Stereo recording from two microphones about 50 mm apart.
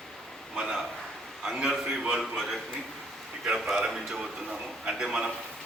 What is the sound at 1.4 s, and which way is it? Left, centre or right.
A man's voice, centre.